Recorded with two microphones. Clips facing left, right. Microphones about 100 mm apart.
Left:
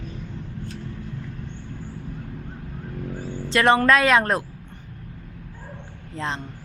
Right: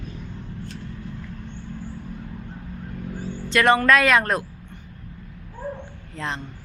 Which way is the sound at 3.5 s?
30° left (ahead or behind).